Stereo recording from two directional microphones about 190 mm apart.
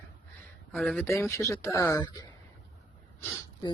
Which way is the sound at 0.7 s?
5° left (ahead or behind).